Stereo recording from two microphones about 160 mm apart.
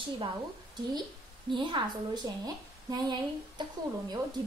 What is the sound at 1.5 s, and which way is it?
A woman's voice, 30° right (ahead or behind).